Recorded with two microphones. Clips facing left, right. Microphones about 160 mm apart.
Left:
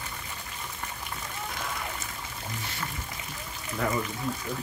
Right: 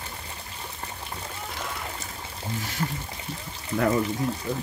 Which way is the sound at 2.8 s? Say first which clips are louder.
Right 8 dB; 35° right (ahead or behind).